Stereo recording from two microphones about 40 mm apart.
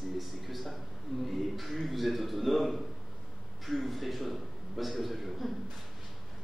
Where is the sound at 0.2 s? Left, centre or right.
Centre.